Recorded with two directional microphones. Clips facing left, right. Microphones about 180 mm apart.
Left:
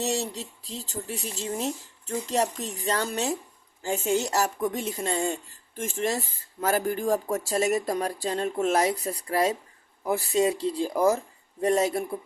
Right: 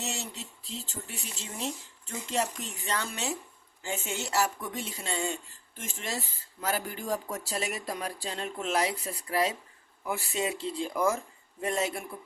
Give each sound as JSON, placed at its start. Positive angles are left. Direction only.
{"t": 0.0, "sound": "speech", "side_deg": 35}